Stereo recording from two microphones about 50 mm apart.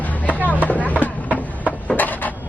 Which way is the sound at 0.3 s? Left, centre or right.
Left.